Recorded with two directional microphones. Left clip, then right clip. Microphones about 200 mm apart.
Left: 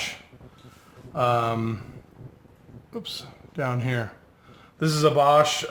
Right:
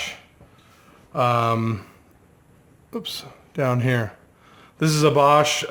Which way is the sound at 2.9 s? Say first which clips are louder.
Right 4 dB; 50° right (ahead or behind).